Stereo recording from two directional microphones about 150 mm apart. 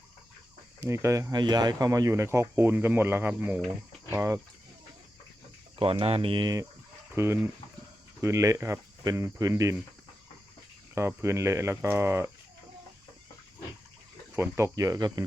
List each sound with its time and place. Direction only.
0.8 s speech: 20° right (ahead or behind)
5.7 s speech: 35° right (ahead or behind); by 9.8 s 20° right (ahead or behind)
10.9 s speech: 20° right (ahead or behind)
14.3 s speech: 20° right (ahead or behind)